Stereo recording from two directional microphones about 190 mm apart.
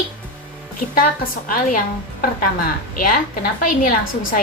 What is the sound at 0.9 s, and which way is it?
Speech, 50° left (ahead or behind).